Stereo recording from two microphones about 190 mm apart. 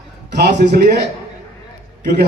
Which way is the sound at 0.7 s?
60° right (ahead or behind).